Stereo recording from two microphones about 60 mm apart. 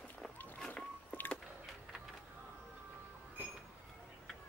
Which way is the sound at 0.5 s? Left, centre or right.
Centre.